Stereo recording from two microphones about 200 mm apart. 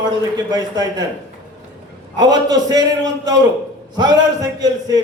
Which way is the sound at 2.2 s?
20° right (ahead or behind).